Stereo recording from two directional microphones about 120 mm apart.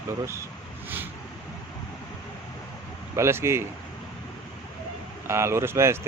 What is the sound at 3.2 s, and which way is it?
Speech, 20° right (ahead or behind).